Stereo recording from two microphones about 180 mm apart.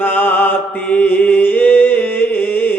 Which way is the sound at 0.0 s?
10° left (ahead or behind).